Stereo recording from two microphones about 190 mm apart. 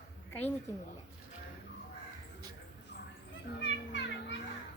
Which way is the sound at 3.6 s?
70° left (ahead or behind).